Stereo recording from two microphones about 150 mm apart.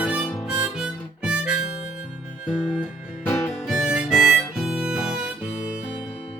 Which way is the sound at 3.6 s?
5° right (ahead or behind).